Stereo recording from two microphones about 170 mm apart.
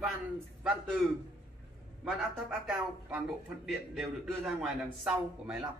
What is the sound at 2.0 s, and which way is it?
A man's voice, centre (ahead or behind).